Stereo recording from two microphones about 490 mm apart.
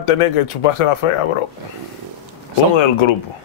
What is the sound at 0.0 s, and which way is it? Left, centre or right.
Speech, left.